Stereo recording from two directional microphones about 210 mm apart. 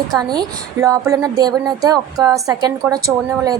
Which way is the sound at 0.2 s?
20° right (ahead or behind).